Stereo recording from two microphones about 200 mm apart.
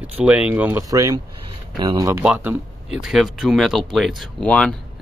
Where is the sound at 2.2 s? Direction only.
5° right (ahead or behind).